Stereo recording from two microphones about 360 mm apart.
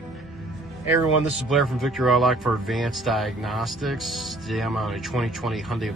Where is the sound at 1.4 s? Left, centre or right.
Centre.